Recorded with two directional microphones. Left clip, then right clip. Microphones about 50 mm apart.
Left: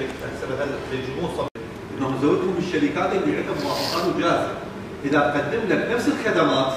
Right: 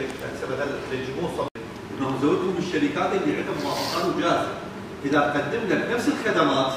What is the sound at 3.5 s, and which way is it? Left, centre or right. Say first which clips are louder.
Speech: left 2 dB; left.